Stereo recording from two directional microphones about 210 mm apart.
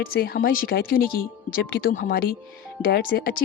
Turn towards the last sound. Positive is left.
turn(degrees=50)  # may be behind; listen again after turning